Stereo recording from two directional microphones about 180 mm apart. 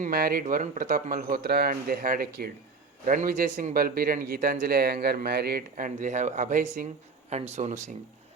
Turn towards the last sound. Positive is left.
turn(degrees=-40)  # may be behind; listen again after turning